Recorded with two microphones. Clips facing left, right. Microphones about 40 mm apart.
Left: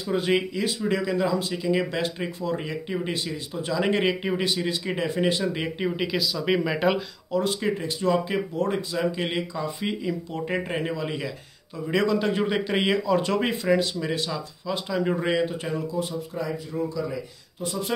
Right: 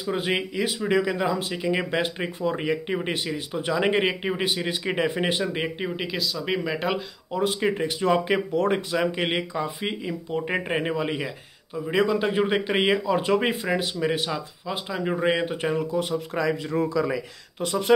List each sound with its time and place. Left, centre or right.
0.0 s a man's voice: right
3.8 s a man's voice: right
5.5 s speech: centre
6.3 s speech: centre
7.3 s speech: right
9.8 s a man's voice: right
11.9 s a man's voice: centre
15.3 s speech: right
16.3 s speech: right
17.6 s speech: right